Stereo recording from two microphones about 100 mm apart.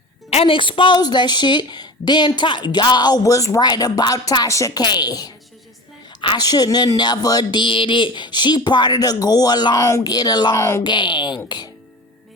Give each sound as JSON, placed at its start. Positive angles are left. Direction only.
{"t": 0.3, "sound": "a woman's voice", "side_deg": 75}
{"t": 0.9, "sound": "a woman's voice", "side_deg": 45}
{"t": 4.8, "sound": "a woman's voice", "side_deg": 45}
{"t": 7.6, "sound": "a woman's voice", "side_deg": 60}
{"t": 10.6, "sound": "speech", "side_deg": 25}
{"t": 10.8, "sound": "a woman's voice", "side_deg": 50}